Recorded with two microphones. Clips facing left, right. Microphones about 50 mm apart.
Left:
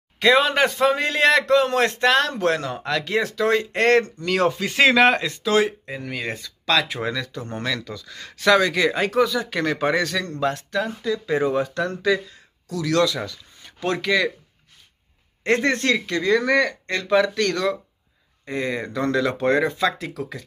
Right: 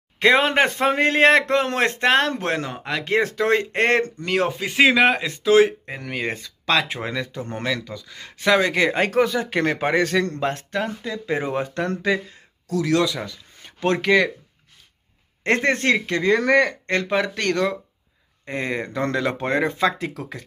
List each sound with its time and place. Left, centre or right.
0.2 s a man's voice: right
3.1 s speech: right
4.4 s a man's voice: centre
5.2 s speech: right
5.7 s a man's voice: right
12.9 s a man's voice: right
13.6 s speech: right
15.4 s speech: right